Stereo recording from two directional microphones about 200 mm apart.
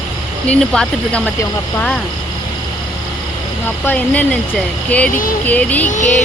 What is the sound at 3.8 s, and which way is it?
Speech, 10° left (ahead or behind).